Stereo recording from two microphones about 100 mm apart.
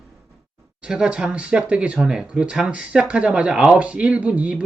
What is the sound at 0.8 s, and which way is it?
Speech, 10° right (ahead or behind).